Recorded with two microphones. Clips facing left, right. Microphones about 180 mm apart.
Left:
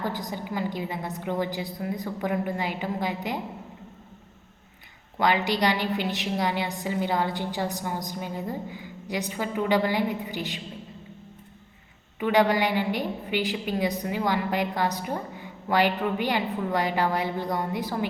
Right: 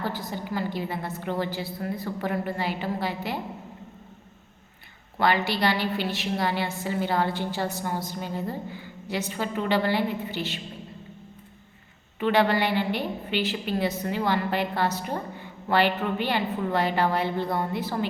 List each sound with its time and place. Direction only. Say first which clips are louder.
0.0 s a woman's voice: even; 15° left (ahead or behind)
5.2 s a woman's voice: even; 15° left (ahead or behind)
12.2 s a woman's voice: even; 15° left (ahead or behind)